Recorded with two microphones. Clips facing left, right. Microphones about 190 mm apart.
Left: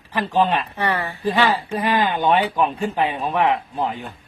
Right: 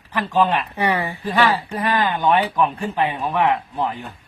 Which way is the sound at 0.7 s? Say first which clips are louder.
Right 2 dB; 15° right (ahead or behind).